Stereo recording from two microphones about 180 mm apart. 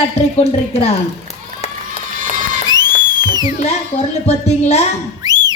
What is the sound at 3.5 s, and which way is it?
A woman's voice, 40° left (ahead or behind).